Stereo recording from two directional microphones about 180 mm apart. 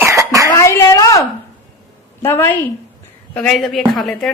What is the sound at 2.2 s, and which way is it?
A woman's voice, 15° left (ahead or behind).